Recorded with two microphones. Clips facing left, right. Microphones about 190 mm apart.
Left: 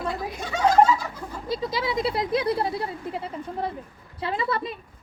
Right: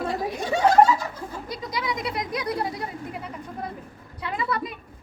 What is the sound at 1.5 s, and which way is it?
Speech, 25° left (ahead or behind).